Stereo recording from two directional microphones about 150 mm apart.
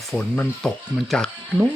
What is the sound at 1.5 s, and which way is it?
Speech, 10° right (ahead or behind).